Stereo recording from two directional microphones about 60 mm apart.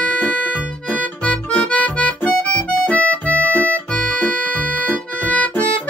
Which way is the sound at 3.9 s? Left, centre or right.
Centre.